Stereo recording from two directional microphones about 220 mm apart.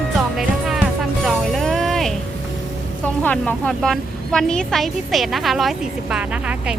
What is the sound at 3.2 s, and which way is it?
A woman's voice, 5° left (ahead or behind).